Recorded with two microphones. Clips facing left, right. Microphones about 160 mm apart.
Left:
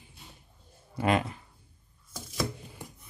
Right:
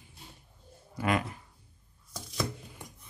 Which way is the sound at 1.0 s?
25° left (ahead or behind).